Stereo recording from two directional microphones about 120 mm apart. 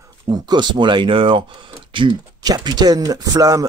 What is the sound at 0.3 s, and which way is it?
Speech, 35° right (ahead or behind).